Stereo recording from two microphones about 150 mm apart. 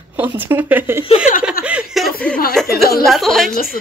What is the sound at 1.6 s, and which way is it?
Chuckle, 5° right (ahead or behind).